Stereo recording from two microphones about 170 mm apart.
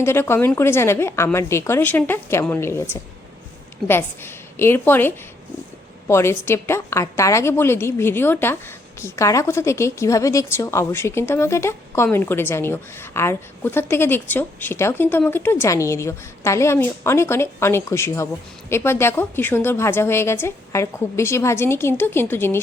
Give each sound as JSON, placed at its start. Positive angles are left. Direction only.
{"t": 0.0, "sound": "a woman's voice", "side_deg": 15}